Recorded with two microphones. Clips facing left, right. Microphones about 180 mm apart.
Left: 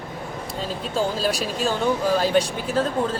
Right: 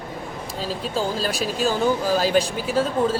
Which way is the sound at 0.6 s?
Centre (ahead or behind).